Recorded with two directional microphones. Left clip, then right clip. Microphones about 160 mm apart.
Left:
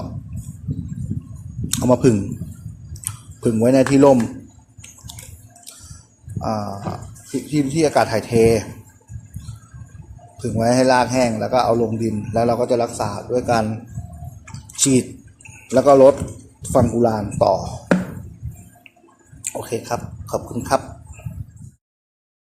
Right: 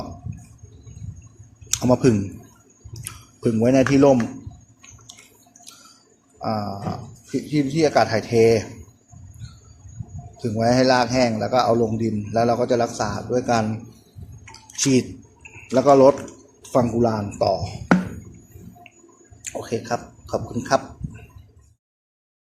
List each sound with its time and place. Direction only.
1.7 s speech: 5° left (ahead or behind)
3.4 s a man's voice: 5° left (ahead or behind)
4.0 s a man's voice: 15° left (ahead or behind)
6.4 s speech: 10° left (ahead or behind)
10.3 s a man's voice: 5° left (ahead or behind)
14.5 s drip: centre (ahead or behind)
15.7 s a man's voice: 5° left (ahead or behind)
19.5 s speech: 5° left (ahead or behind)